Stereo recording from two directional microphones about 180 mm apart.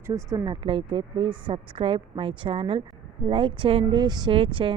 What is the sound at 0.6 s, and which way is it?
A woman's voice, 30° right (ahead or behind).